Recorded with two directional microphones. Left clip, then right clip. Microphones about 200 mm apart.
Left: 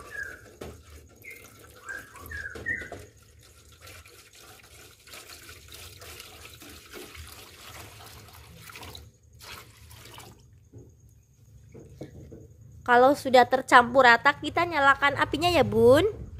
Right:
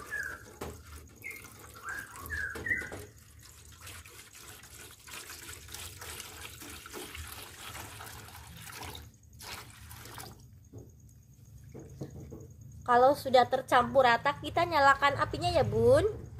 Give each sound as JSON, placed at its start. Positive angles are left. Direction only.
{"t": 12.8, "sound": "a woman's voice", "side_deg": 25}
{"t": 15.3, "sound": "a woman's voice", "side_deg": 30}